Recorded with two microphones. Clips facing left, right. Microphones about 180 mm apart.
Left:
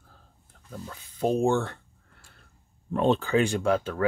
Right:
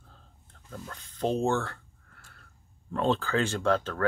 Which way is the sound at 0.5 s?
5° left (ahead or behind).